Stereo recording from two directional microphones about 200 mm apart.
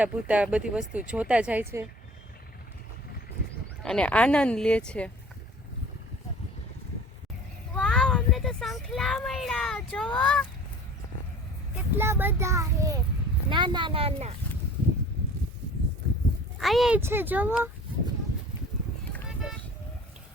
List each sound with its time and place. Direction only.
0.0 s speech: 5° right (ahead or behind)
3.8 s speech: 5° left (ahead or behind)
7.8 s speech: 5° left (ahead or behind)
11.9 s a child's voice: 10° right (ahead or behind); by 14.3 s 30° right (ahead or behind)
16.6 s a child's voice: centre (ahead or behind)